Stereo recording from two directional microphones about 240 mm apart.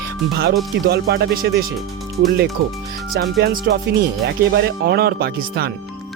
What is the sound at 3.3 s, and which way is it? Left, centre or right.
Speech, right.